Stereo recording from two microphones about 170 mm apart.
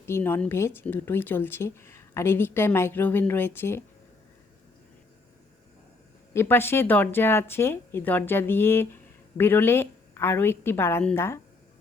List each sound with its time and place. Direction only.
0.0 s speech: 15° left (ahead or behind)
6.3 s speech: 15° left (ahead or behind)